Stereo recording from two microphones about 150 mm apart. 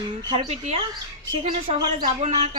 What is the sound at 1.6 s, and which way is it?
Speech, 35° right (ahead or behind).